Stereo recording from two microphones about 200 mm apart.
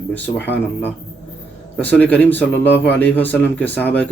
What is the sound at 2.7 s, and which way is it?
Speech, 60° left (ahead or behind).